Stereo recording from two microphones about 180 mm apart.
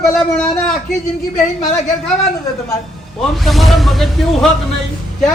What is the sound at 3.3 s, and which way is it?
A man's voice, centre (ahead or behind).